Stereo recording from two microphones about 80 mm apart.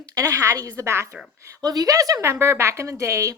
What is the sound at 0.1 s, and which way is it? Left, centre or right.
Speech, right.